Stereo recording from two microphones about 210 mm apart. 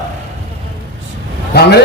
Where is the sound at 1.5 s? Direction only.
50° left (ahead or behind).